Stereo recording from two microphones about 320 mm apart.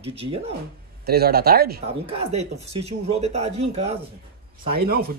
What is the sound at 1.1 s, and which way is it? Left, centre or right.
Speech, right.